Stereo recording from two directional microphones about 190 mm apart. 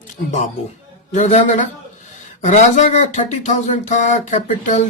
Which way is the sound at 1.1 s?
35° left (ahead or behind).